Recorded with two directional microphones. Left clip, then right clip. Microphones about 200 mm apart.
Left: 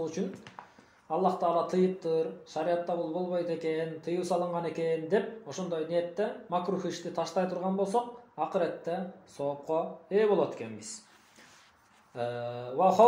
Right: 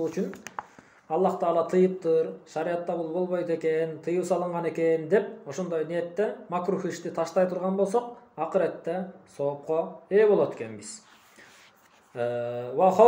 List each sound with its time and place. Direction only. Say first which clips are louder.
0.6 s a sound: right 11 dB; 50° right (ahead or behind)
1.0 s speech: right 3 dB; 30° right (ahead or behind)
12.2 s speech: right 6 dB; 25° right (ahead or behind)